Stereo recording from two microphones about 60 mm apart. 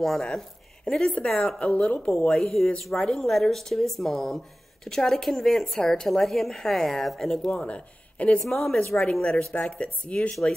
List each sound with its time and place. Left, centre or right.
0.0 s a woman's voice: centre
2.2 s a woman's voice: centre
7.5 s a woman's voice: left